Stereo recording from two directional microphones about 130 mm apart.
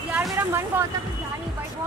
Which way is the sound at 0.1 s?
20° right (ahead or behind).